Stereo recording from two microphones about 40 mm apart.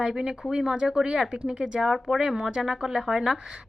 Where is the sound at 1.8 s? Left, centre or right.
Centre.